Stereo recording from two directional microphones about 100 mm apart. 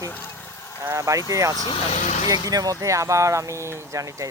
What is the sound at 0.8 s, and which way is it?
Speech, 30° right (ahead or behind).